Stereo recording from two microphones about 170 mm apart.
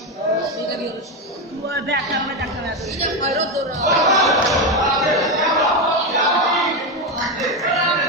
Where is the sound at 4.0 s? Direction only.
Centre (ahead or behind).